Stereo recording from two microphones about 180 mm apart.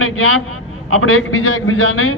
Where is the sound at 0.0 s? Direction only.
90° left.